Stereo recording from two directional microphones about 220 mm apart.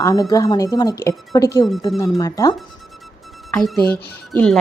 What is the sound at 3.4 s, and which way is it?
Speech, centre (ahead or behind).